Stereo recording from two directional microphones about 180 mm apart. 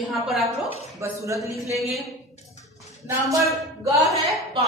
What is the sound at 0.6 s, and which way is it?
Speech, 35° left (ahead or behind).